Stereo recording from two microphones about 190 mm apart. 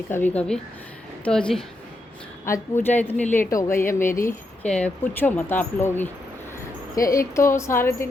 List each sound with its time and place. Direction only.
0.1 s a woman's voice: 10° left (ahead or behind)